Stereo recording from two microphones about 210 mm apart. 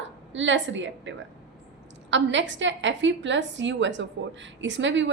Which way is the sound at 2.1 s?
60° right (ahead or behind).